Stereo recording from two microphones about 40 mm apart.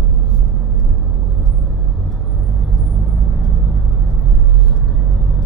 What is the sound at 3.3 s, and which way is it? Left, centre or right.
Vehicle, centre.